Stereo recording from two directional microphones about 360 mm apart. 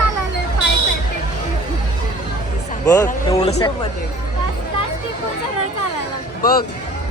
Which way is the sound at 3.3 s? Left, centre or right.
Centre.